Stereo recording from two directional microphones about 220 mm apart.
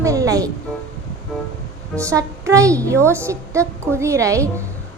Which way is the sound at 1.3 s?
Centre (ahead or behind).